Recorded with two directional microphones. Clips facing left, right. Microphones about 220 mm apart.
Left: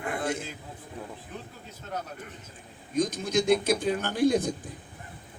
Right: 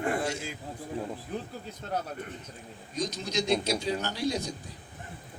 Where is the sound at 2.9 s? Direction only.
50° left (ahead or behind).